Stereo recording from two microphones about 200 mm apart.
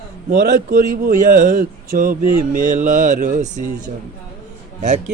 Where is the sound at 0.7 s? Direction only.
45° right (ahead or behind).